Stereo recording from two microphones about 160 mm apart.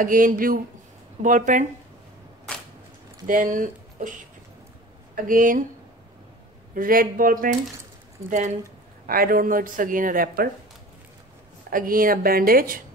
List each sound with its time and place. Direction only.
0.0 s speech: 60° right (ahead or behind)
3.3 s speech: 55° right (ahead or behind)
5.1 s speech: 55° right (ahead or behind)
6.7 s speech: 60° right (ahead or behind)
9.0 s speech: 65° right (ahead or behind)
11.7 s speech: 60° right (ahead or behind)